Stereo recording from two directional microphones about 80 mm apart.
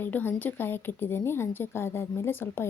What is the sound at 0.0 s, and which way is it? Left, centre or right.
A woman's voice, left.